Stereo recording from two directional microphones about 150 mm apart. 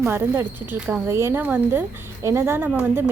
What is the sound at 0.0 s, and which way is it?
A woman's voice, 15° right (ahead or behind).